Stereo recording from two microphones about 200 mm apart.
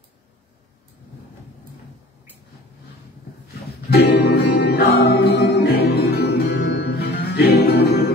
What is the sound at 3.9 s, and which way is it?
Music, 55° left (ahead or behind).